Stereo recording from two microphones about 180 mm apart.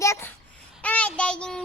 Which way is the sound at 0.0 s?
15° left (ahead or behind).